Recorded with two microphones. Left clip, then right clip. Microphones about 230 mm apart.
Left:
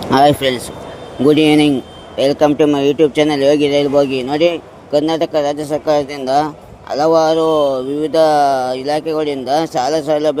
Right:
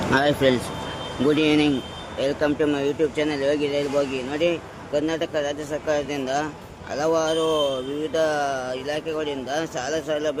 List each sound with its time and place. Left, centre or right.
0.1 s speech: left